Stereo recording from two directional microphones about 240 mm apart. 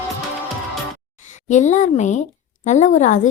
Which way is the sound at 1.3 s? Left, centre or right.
Left.